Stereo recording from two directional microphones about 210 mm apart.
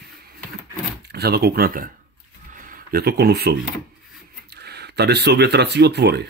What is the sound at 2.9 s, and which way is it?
Speech, 45° right (ahead or behind).